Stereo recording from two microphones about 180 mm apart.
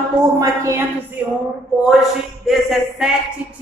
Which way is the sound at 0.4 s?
15° right (ahead or behind).